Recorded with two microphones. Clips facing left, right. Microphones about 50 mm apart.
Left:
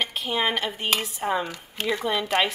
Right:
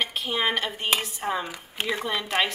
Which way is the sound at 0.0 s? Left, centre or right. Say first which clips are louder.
Left 1 dB; centre.